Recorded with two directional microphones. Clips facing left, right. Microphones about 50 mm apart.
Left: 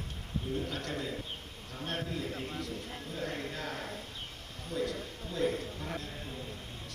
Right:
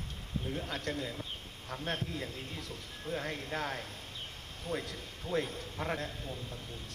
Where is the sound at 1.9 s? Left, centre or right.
Left.